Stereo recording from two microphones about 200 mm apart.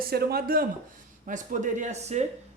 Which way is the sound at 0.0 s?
50° right (ahead or behind).